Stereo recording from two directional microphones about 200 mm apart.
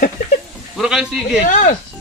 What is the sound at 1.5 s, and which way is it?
Speech, 40° left (ahead or behind).